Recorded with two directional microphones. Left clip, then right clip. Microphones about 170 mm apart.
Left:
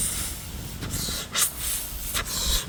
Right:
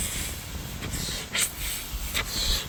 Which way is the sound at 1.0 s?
20° left (ahead or behind).